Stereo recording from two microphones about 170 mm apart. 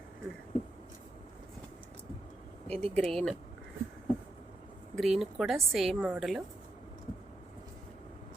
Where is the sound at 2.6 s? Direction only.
35° right (ahead or behind).